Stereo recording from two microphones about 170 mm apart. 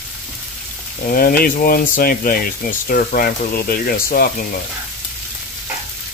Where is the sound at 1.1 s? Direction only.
60° left (ahead or behind).